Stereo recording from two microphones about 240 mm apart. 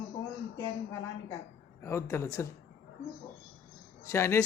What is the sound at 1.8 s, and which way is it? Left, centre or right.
Speech, centre.